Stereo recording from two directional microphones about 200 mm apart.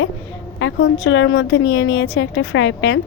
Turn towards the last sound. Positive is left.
turn(degrees=65)  # may be behind; listen again after turning